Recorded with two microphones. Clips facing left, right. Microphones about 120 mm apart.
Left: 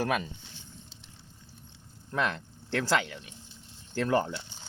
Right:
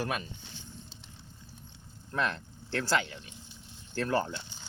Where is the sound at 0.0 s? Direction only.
90° left.